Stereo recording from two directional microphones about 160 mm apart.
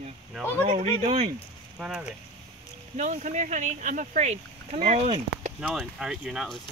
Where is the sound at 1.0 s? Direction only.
40° right (ahead or behind).